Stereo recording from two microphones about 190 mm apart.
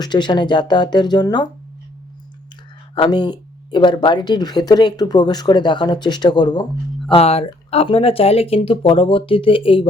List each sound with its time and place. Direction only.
0.0 s speech: 25° left (ahead or behind)
2.9 s speech: 25° left (ahead or behind)
7.1 s speech: 30° left (ahead or behind)